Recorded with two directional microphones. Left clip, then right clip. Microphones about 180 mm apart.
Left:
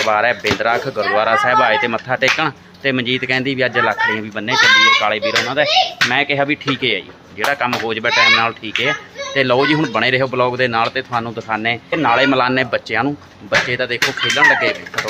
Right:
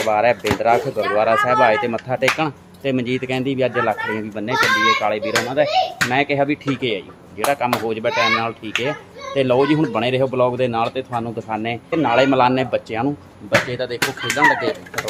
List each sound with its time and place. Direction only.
0.1 s speech: 5° right (ahead or behind)
13.7 s speech: 15° left (ahead or behind)